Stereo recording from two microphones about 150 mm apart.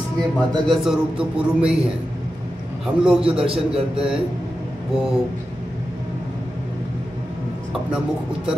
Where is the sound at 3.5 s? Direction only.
40° right (ahead or behind).